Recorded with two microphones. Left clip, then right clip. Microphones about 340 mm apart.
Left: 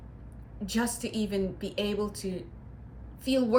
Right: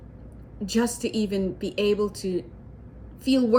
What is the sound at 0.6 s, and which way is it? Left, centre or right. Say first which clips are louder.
A woman's voice: right 6 dB; centre.